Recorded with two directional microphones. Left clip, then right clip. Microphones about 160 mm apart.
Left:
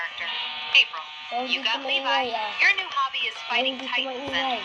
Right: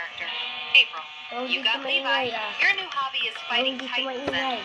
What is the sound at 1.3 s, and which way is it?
Speech, 35° right (ahead or behind).